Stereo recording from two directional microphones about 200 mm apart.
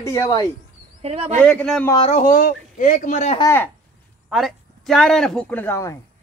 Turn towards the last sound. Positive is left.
turn(degrees=10)  # may be behind; listen again after turning